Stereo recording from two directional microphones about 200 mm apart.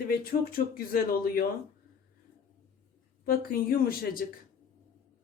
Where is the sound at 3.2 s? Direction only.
45° left (ahead or behind).